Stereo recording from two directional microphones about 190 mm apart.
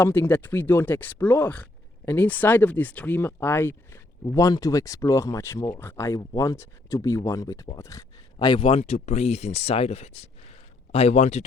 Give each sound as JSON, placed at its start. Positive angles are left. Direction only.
{"t": 0.0, "sound": "speech", "side_deg": 10}